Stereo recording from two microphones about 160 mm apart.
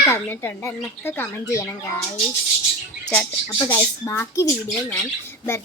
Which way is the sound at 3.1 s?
10° left (ahead or behind).